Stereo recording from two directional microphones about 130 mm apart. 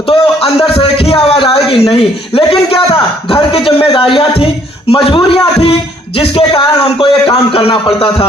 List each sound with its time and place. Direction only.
0.0 s a man's voice: 45° left (ahead or behind)